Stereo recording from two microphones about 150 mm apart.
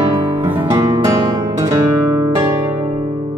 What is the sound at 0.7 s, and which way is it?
Music, 25° right (ahead or behind).